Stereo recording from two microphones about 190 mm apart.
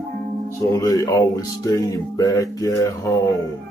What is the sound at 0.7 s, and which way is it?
Speech, 15° left (ahead or behind).